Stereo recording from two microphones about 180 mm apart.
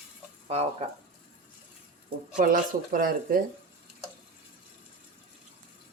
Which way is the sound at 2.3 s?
50° right (ahead or behind).